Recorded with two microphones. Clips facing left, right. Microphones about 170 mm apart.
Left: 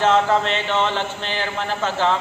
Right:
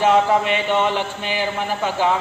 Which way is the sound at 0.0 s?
10° right (ahead or behind).